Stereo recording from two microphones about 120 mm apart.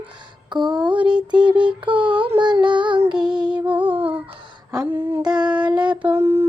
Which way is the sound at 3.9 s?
45° right (ahead or behind).